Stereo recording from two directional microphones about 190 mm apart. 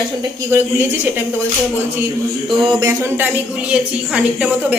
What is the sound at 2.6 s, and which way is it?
A woman's voice, 25° right (ahead or behind).